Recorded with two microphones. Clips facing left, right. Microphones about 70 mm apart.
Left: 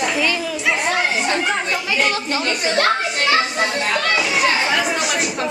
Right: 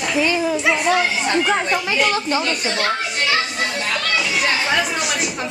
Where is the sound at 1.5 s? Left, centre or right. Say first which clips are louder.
Right 2 dB; centre.